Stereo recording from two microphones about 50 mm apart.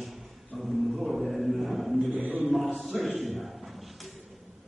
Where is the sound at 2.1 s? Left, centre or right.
Right.